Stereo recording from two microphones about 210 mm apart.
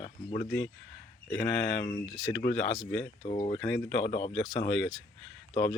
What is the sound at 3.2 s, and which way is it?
Speech, 25° left (ahead or behind).